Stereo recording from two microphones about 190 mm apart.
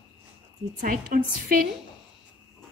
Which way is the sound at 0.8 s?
45° right (ahead or behind).